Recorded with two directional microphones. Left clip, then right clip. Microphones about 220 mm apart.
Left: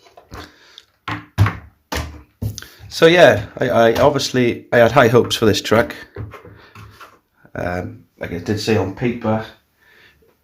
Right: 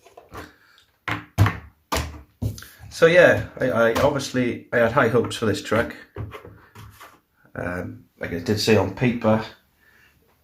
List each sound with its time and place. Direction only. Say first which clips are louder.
2.6 s speech: left 4 dB; 50° left (ahead or behind)
7.5 s speech: left 6 dB; 40° left (ahead or behind)
8.2 s speech: left 2 dB; 20° left (ahead or behind)
8.5 s speech: even; 5° left (ahead or behind)